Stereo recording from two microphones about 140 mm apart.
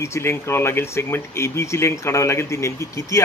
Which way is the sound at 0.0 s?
20° left (ahead or behind).